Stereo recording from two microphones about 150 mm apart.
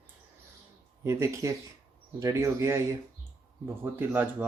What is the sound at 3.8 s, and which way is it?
Speech, 15° right (ahead or behind).